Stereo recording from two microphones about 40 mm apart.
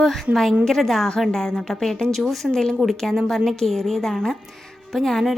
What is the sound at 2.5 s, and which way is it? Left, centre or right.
Speech, centre.